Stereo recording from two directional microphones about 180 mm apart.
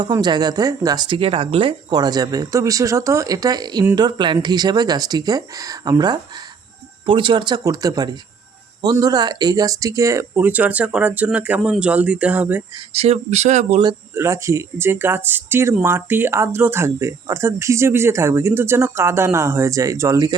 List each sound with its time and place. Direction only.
0.0 s speech: 25° right (ahead or behind)
12.9 s speech: 35° right (ahead or behind)
14.2 s speech: 15° right (ahead or behind)